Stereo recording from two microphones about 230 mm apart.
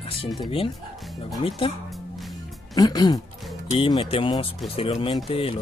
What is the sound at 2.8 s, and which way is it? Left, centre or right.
Speech, centre.